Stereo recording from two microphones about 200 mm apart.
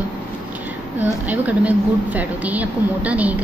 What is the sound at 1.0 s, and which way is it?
A woman's voice, 10° right (ahead or behind).